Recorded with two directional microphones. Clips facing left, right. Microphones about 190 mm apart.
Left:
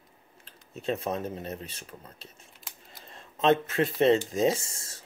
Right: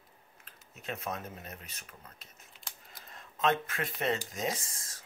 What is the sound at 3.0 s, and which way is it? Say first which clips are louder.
Speech: left 6 dB; 30° left (ahead or behind).